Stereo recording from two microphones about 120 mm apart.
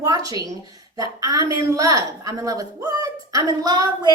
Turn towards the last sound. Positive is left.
turn(degrees=-35)  # may be behind; listen again after turning